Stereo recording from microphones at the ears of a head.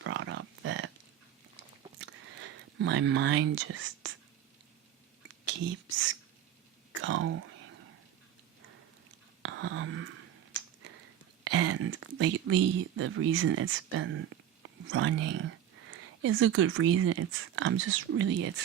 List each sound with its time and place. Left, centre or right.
0.0 s pig: right
1.5 s chewing: right
5.2 s whispering: right
6.9 s a sound: right
9.4 s speech: right